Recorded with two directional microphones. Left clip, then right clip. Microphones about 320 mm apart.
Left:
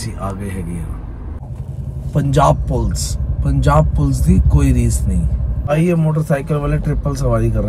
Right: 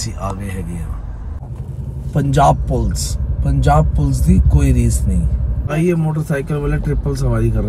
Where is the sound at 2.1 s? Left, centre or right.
Centre.